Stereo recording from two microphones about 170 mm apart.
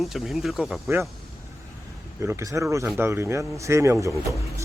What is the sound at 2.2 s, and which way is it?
Speech, 15° right (ahead or behind).